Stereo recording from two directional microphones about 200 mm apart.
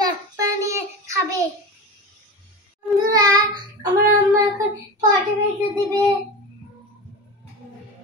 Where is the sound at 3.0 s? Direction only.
20° right (ahead or behind).